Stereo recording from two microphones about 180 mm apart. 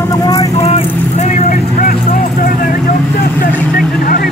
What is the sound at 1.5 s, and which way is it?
Vehicle, 50° left (ahead or behind).